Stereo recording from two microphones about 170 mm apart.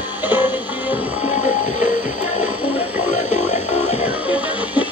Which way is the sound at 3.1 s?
45° left (ahead or behind).